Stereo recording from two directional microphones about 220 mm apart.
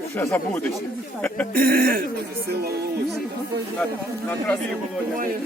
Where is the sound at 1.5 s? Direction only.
45° right (ahead or behind).